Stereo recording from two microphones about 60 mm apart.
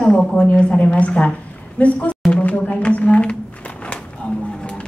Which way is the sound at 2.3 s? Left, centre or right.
Left.